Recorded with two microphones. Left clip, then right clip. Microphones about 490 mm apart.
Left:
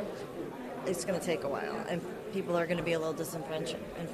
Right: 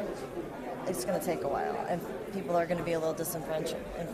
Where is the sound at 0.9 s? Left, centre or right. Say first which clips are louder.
Even; centre.